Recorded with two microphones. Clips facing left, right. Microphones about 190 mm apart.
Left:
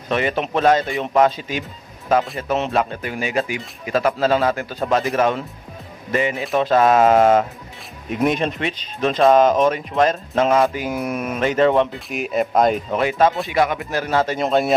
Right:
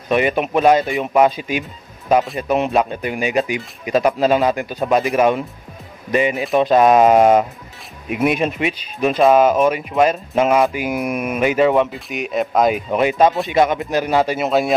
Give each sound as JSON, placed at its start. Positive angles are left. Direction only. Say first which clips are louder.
{"t": 0.1, "sound": "speech", "louder": "right 4 dB", "side_deg": -15}
{"t": 12.7, "sound": "speech", "louder": "right 3 dB", "side_deg": -15}